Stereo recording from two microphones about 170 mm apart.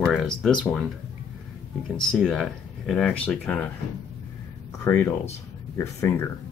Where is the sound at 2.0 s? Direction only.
Centre (ahead or behind).